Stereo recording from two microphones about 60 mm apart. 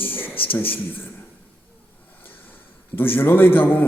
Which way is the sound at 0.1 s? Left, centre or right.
Left.